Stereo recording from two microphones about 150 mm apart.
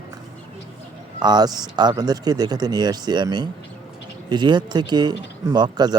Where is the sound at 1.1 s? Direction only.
30° right (ahead or behind).